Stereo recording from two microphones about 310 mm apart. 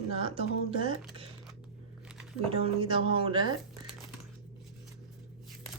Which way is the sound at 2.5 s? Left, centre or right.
Centre.